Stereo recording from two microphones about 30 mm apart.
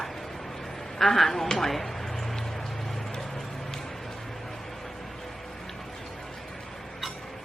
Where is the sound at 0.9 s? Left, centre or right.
Centre.